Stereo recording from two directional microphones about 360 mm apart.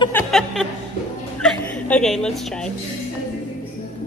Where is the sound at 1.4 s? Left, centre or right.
Centre.